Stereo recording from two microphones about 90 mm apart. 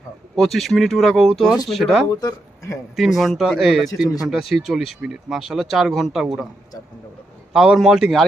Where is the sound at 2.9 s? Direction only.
Centre (ahead or behind).